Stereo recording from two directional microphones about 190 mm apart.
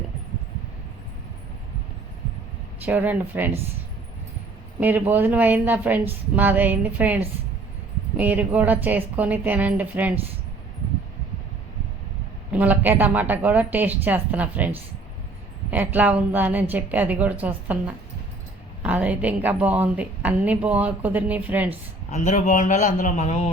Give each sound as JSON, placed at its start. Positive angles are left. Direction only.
{"t": 2.8, "sound": "a woman's voice", "side_deg": -10}
{"t": 4.8, "sound": "a woman's voice", "side_deg": -10}
{"t": 12.5, "sound": "a woman's voice", "side_deg": -10}
{"t": 15.7, "sound": "a woman's voice", "side_deg": -10}
{"t": 22.1, "sound": "a man's voice", "side_deg": 40}